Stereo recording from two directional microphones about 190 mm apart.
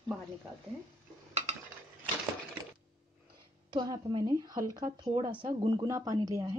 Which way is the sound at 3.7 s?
20° right (ahead or behind).